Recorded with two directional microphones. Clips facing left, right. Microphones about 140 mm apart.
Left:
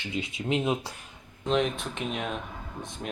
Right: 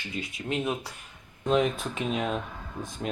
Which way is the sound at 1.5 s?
5° right (ahead or behind).